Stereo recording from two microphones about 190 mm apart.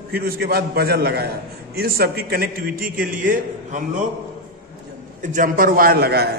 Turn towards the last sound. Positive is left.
turn(degrees=-55)  # may be behind; listen again after turning